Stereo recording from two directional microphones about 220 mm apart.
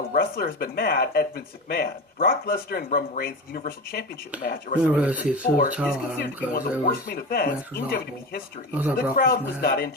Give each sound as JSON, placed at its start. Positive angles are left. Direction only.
{"t": 0.1, "sound": "speech", "side_deg": 40}
{"t": 4.8, "sound": "speech", "side_deg": -5}
{"t": 6.2, "sound": "speech", "side_deg": 45}
{"t": 8.7, "sound": "speech", "side_deg": -10}
{"t": 9.1, "sound": "speech", "side_deg": 40}